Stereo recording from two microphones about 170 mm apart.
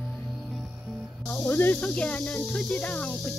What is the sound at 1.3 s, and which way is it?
Speech, 5° left (ahead or behind).